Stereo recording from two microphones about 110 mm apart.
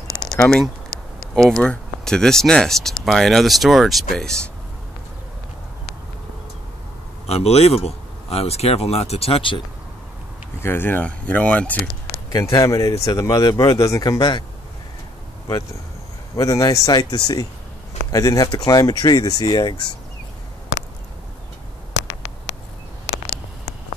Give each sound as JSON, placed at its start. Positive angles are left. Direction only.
{"t": 0.4, "sound": "speech", "side_deg": 5}
{"t": 7.2, "sound": "speech", "side_deg": 70}
{"t": 10.6, "sound": "speech", "side_deg": 20}
{"t": 12.3, "sound": "speech", "side_deg": 35}
{"t": 16.3, "sound": "speech", "side_deg": 30}